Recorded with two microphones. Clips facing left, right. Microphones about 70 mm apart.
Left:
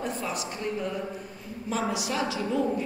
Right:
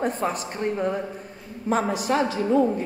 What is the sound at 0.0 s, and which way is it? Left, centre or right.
A woman's voice, right.